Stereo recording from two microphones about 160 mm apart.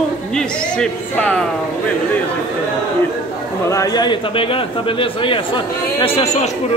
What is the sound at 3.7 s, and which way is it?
Speech, 20° left (ahead or behind).